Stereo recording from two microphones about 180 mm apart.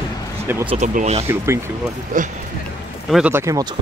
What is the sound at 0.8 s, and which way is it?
Speech, 40° right (ahead or behind).